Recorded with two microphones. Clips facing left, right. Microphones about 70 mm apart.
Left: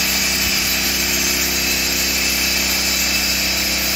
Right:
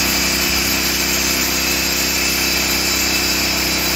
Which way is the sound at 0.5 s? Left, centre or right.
Centre.